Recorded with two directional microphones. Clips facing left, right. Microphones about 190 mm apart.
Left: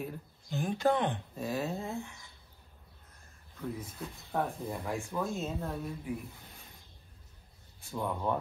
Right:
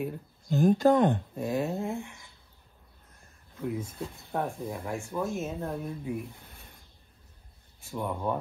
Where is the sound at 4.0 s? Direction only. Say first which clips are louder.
Right 5 dB; 30° right (ahead or behind).